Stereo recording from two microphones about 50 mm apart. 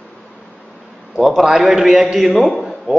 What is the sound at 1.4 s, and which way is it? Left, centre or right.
A man's voice, centre.